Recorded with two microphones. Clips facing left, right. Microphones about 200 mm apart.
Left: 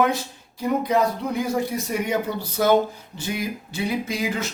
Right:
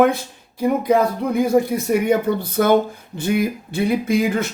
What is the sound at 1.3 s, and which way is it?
Speech, 55° right (ahead or behind).